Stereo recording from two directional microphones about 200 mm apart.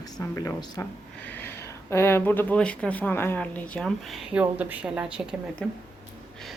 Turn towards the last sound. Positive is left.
turn(degrees=5)  # may be behind; listen again after turning